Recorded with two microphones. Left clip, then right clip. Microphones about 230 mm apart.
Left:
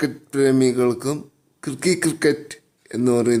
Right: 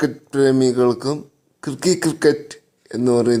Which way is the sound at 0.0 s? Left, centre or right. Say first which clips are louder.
Right 2 dB; centre.